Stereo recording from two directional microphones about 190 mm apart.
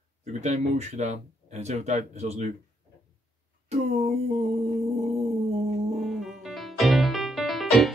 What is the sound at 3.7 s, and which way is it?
Speech, 35° right (ahead or behind).